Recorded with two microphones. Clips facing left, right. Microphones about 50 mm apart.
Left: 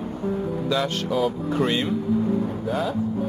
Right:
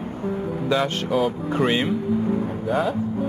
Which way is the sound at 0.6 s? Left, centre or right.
Right.